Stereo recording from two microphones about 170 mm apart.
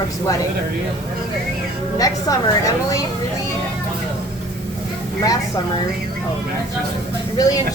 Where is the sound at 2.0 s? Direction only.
20° left (ahead or behind).